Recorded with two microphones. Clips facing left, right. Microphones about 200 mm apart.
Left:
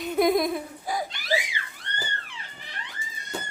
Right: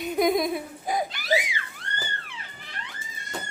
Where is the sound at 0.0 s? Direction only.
Centre (ahead or behind).